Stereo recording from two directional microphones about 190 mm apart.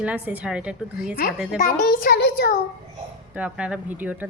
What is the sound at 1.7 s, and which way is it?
Speech, 50° left (ahead or behind).